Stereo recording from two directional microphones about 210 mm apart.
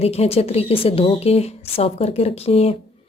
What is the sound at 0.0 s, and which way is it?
A woman's voice, 30° left (ahead or behind).